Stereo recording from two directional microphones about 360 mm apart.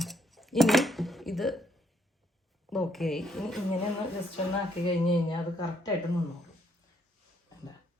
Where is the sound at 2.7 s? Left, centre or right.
Centre.